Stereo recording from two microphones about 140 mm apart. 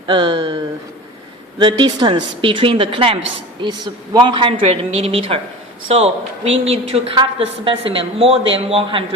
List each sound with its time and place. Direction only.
0.1 s a woman's voice: 35° right (ahead or behind)